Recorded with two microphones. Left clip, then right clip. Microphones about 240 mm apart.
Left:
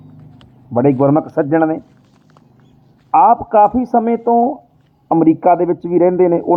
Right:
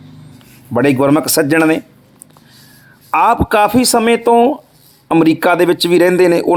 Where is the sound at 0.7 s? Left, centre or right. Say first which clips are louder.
Right 1 dB; right.